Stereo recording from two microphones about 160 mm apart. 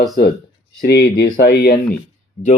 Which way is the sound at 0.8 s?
85° left.